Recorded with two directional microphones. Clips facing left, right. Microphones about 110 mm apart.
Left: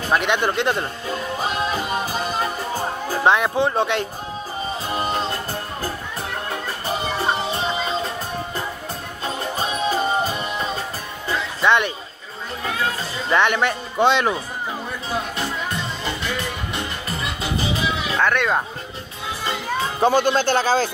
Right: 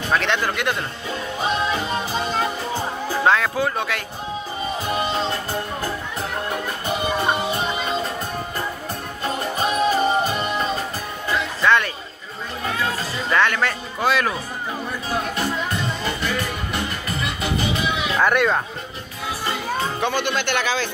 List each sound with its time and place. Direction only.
0.1 s a man's voice: 15° left (ahead or behind)
0.6 s speech: 30° left (ahead or behind)
1.9 s music: 10° left (ahead or behind); by 5.1 s 30° left (ahead or behind)
6.9 s music: 30° left (ahead or behind)
9.6 s music: 30° left (ahead or behind)
11.2 s music: 20° left (ahead or behind)
13.3 s speech: 20° left (ahead or behind)
16.7 s music: 30° left (ahead or behind)
18.2 s speech: 10° right (ahead or behind)
20.0 s speech: 40° left (ahead or behind)